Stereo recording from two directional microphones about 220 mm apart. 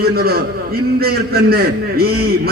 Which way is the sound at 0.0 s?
45° right (ahead or behind).